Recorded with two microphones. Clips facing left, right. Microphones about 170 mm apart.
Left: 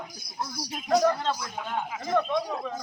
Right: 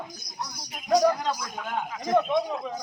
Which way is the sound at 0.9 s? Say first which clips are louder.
Right 1 dB; 15° right (ahead or behind).